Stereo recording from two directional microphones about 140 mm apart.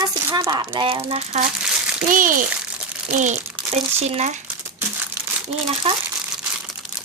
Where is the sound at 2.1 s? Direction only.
70° right (ahead or behind).